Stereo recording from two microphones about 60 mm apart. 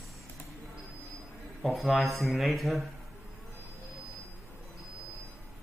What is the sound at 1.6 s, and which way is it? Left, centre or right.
Speech, centre.